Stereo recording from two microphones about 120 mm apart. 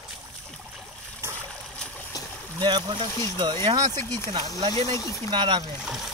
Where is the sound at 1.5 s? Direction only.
10° left (ahead or behind).